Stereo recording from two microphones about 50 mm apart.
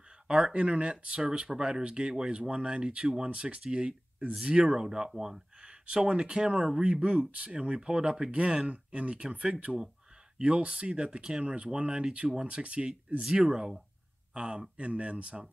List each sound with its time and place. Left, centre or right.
0.5 s speech: right; by 5.4 s centre
5.6 s speech: centre